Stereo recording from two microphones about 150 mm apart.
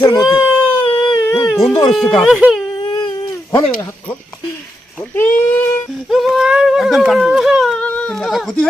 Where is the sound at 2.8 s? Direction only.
30° left (ahead or behind).